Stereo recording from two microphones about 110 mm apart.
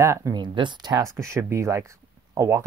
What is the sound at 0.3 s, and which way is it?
Speech, 45° right (ahead or behind).